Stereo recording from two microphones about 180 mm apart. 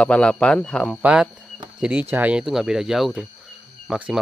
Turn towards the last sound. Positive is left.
turn(degrees=-5)  # may be behind; listen again after turning